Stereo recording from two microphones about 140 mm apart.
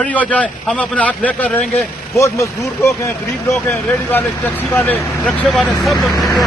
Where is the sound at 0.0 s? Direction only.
10° left (ahead or behind).